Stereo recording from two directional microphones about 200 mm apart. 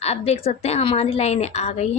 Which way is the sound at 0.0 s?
30° left (ahead or behind).